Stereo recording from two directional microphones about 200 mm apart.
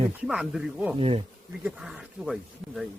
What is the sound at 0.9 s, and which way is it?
Speech, 30° right (ahead or behind).